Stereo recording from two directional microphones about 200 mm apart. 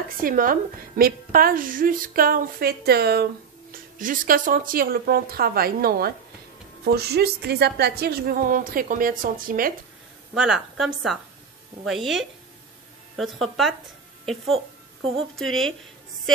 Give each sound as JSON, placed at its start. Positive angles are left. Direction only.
{"t": 0.2, "sound": "a woman's voice", "side_deg": -45}
{"t": 10.3, "sound": "a woman's voice", "side_deg": -5}